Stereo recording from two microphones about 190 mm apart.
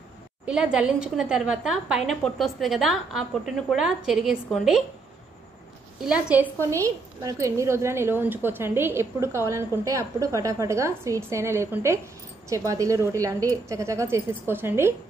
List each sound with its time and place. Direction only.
0.5 s a woman's voice: 5° right (ahead or behind)
6.0 s a woman's voice: 5° right (ahead or behind)